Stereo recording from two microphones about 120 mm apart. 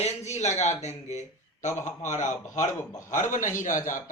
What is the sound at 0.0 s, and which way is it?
Speech, 70° left (ahead or behind).